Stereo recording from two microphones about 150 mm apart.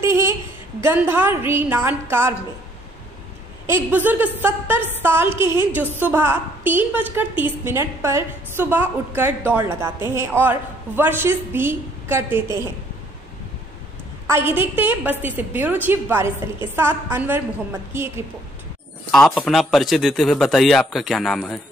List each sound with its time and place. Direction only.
0.8 s a woman's voice: 15° right (ahead or behind)
3.6 s a woman's voice: 15° right (ahead or behind)
14.3 s a woman's voice: 15° right (ahead or behind)
19.1 s speech: 5° left (ahead or behind)